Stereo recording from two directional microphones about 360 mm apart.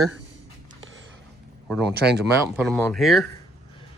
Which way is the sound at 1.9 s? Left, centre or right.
Right.